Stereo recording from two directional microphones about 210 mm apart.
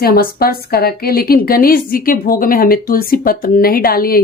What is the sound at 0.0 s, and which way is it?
A woman's voice, 45° left (ahead or behind).